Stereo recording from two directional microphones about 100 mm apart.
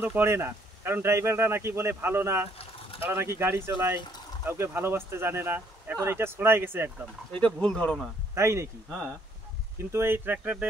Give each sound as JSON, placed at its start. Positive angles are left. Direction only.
{"t": 0.0, "sound": "speech", "side_deg": -20}
{"t": 7.3, "sound": "speech", "side_deg": 10}
{"t": 8.4, "sound": "speech", "side_deg": -30}
{"t": 9.9, "sound": "speech", "side_deg": -25}